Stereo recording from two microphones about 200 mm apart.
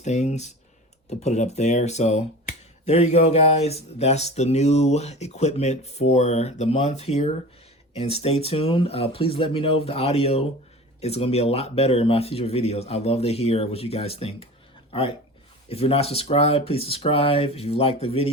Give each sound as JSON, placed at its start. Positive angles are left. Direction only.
{"t": 0.0, "sound": "speech", "side_deg": 35}